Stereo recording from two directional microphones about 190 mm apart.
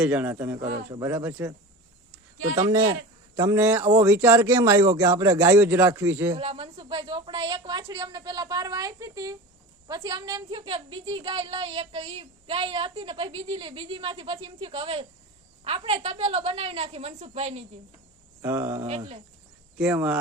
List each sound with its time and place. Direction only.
0.0 s a man's voice: 10° right (ahead or behind)
3.3 s a man's voice: 10° right (ahead or behind)
6.3 s a woman's voice: 30° right (ahead or behind)
18.4 s a man's voice: 15° right (ahead or behind)
18.9 s a woman's voice: 35° right (ahead or behind)
19.8 s a man's voice: 5° right (ahead or behind)